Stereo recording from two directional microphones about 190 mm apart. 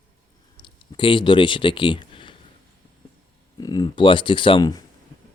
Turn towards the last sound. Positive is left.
turn(degrees=20)  # may be behind; listen again after turning